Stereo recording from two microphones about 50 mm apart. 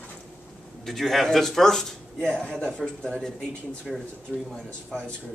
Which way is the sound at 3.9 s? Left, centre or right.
Centre.